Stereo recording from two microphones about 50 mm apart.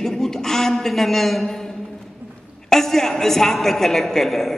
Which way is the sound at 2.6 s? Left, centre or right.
Centre.